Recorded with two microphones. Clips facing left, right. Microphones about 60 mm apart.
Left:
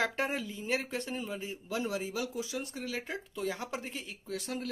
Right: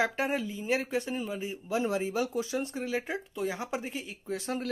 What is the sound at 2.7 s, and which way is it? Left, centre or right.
Speech, right.